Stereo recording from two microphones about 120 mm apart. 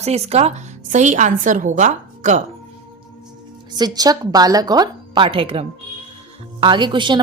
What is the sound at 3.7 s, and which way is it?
A woman's voice, 35° right (ahead or behind).